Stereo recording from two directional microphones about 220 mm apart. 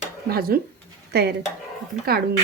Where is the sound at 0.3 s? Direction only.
45° right (ahead or behind).